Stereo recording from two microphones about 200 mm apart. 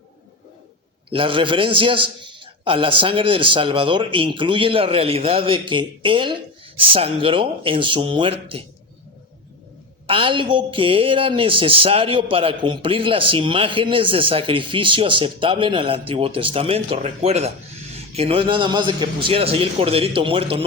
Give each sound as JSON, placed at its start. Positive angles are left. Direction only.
{"t": 1.1, "sound": "a woman's voice", "side_deg": -25}
{"t": 10.1, "sound": "a woman's voice", "side_deg": -25}